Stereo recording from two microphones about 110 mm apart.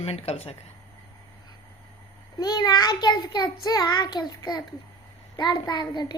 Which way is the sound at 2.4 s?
40° left (ahead or behind).